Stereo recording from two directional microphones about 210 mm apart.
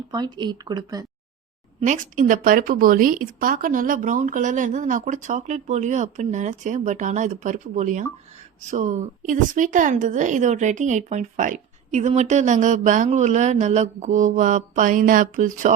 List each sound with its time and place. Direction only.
0.1 s speech: 20° right (ahead or behind)
1.8 s a woman's voice: 35° right (ahead or behind)